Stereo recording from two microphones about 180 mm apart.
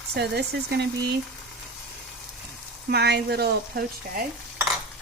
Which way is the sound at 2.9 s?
65° right (ahead or behind).